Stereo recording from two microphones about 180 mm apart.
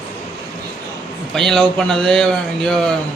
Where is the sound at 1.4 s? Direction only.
5° left (ahead or behind).